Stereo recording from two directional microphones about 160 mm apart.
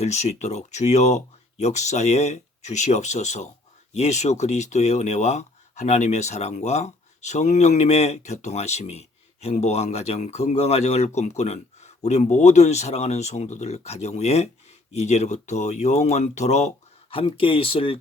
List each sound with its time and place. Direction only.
0.0 s speech: 45° left (ahead or behind)